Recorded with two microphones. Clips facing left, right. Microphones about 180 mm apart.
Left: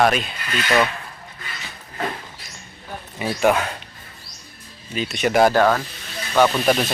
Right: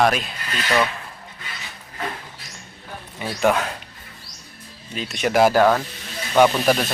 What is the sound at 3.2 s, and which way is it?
Speech, 5° left (ahead or behind).